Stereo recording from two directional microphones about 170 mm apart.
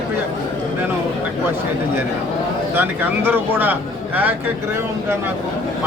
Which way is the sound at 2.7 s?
10° right (ahead or behind).